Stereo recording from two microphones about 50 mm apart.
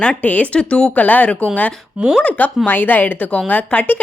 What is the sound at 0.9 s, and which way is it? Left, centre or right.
A woman's voice, left.